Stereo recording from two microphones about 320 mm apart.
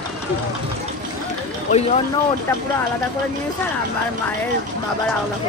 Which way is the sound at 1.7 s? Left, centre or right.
Centre.